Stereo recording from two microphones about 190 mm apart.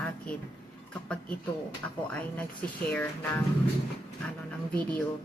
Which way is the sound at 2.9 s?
5° left (ahead or behind).